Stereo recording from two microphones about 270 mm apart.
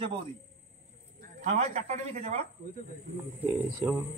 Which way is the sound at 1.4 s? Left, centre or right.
Right.